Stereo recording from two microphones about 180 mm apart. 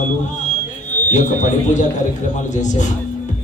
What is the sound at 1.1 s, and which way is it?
A man's voice, 45° left (ahead or behind).